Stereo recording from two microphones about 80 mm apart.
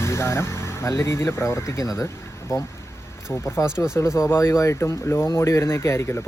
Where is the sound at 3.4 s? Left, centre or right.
Left.